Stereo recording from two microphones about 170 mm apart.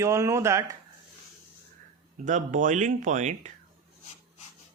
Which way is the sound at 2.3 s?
50° right (ahead or behind).